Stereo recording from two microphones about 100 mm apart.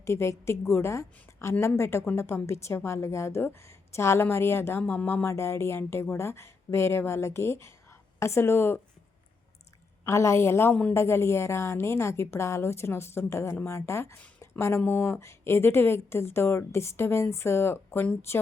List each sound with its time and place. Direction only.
0.0 s a woman's voice: 25° left (ahead or behind)
10.1 s a woman's voice: 30° left (ahead or behind)
10.7 s speech: 10° left (ahead or behind)
10.9 s a woman's voice: 25° left (ahead or behind)